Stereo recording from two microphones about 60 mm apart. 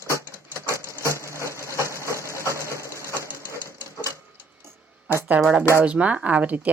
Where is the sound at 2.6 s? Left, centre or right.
Right.